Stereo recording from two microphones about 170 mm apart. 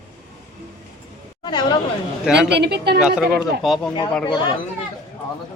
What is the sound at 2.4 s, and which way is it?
Speech, 80° right.